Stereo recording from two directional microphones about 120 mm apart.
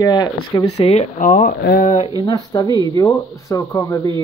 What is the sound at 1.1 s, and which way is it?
Speech, 90° left.